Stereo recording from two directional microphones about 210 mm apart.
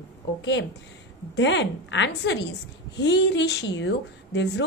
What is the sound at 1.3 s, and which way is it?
A woman's voice, 55° left (ahead or behind).